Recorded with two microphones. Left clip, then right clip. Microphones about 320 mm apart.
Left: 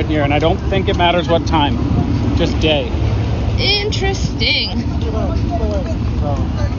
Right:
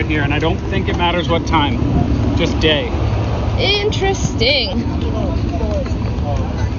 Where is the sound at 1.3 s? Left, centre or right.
Left.